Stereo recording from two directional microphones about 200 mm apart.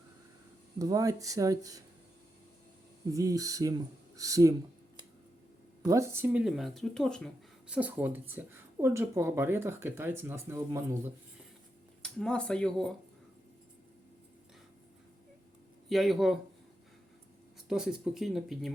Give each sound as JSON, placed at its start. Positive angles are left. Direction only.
{"t": 0.8, "sound": "speech", "side_deg": -15}
{"t": 3.1, "sound": "speech", "side_deg": -15}
{"t": 5.8, "sound": "speech", "side_deg": -15}
{"t": 7.7, "sound": "speech", "side_deg": -5}
{"t": 12.0, "sound": "speech", "side_deg": 5}
{"t": 15.9, "sound": "speech", "side_deg": 0}
{"t": 17.7, "sound": "speech", "side_deg": -5}